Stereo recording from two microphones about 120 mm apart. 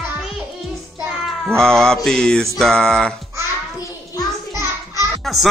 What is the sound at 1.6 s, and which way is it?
A man's voice, 5° left (ahead or behind).